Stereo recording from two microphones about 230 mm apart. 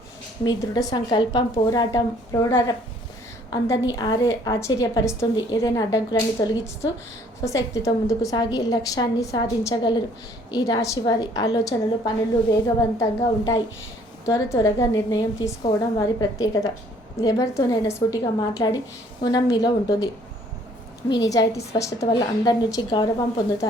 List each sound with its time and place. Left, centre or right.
0.4 s a woman's voice: centre
21.2 s a woman's voice: centre